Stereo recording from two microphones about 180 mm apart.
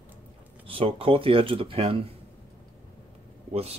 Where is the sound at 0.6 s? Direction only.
30° right (ahead or behind).